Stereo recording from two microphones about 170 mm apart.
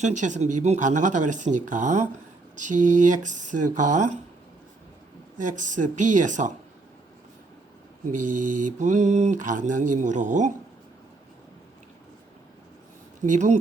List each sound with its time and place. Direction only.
0.0 s speech: 45° right (ahead or behind)
5.5 s speech: 50° right (ahead or behind)
8.3 s speech: 50° right (ahead or behind)
13.2 s speech: 45° right (ahead or behind)